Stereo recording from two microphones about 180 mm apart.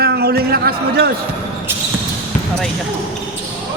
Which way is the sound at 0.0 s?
60° right (ahead or behind).